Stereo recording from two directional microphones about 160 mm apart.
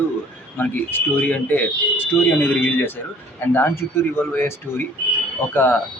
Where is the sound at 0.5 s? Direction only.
10° left (ahead or behind).